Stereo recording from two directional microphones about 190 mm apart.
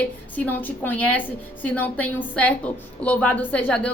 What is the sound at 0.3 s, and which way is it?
A woman's voice, 10° left (ahead or behind).